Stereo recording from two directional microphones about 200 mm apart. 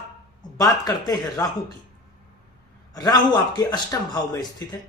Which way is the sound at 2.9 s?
20° left (ahead or behind).